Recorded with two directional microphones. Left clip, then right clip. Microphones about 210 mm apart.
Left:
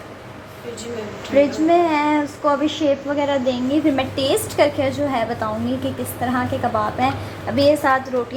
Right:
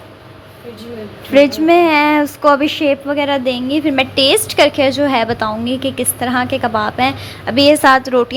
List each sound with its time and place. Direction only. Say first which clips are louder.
1.6 s a woman's voice: right 6 dB; 20° right (ahead or behind)
7.7 s a woman's voice: right 9 dB; 25° right (ahead or behind)